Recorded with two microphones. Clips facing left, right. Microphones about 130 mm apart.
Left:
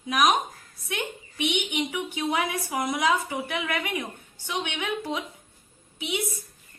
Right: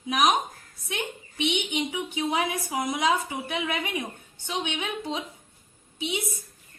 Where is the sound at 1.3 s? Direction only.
25° right (ahead or behind).